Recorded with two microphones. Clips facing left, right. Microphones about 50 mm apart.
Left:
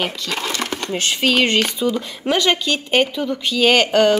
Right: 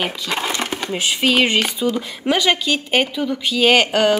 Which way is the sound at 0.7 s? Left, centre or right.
Centre.